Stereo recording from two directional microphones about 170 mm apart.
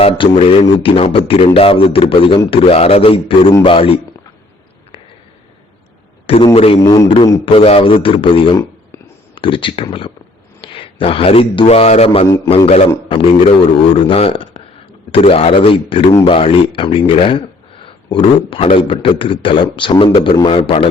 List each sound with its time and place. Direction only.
0.0 s a man's voice: 35° left (ahead or behind)
6.2 s a man's voice: 35° left (ahead or behind)
6.8 s a man's voice: 20° left (ahead or behind)
7.4 s a man's voice: 35° left (ahead or behind)